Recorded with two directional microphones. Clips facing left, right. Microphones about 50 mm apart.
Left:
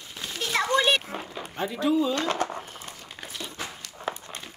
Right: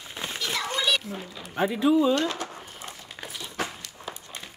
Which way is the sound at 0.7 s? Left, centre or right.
Left.